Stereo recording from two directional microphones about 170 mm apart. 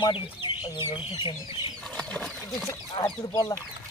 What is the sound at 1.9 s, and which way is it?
Speech, 5° left (ahead or behind).